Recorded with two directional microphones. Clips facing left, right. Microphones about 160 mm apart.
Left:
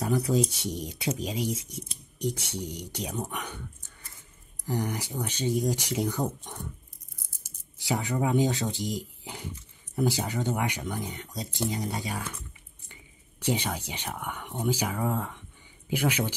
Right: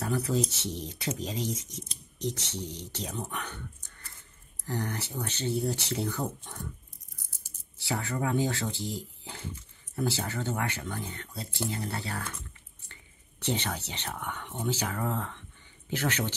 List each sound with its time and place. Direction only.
0.0 s speech: 15° left (ahead or behind)
4.6 s speech: 10° left (ahead or behind)
7.8 s speech: 15° left (ahead or behind)